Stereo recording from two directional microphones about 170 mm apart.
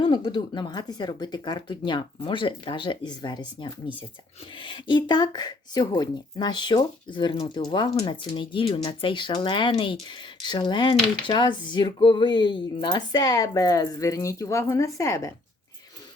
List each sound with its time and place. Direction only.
0.0 s speech: 30° left (ahead or behind)